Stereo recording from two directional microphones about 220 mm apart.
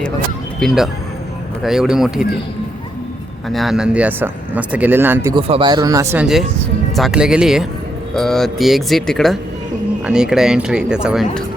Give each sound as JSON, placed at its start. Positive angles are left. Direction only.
{"t": 0.6, "sound": "speech", "side_deg": 0}
{"t": 3.5, "sound": "speech", "side_deg": 0}
{"t": 5.3, "sound": "speech", "side_deg": -25}